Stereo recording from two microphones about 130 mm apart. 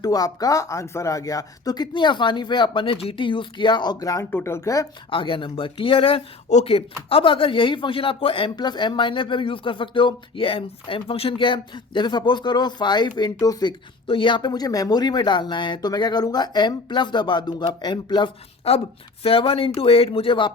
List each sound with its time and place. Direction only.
0.0 s speech: 30° left (ahead or behind)
5.1 s speech: 40° left (ahead or behind)
6.5 s speech: 55° left (ahead or behind); by 18.3 s 35° left (ahead or behind)
18.7 s speech: 50° left (ahead or behind)